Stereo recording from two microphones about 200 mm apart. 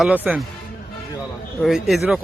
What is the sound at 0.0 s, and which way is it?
Speech, 5° right (ahead or behind).